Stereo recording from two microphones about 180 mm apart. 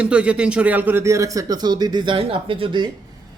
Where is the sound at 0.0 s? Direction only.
5° right (ahead or behind).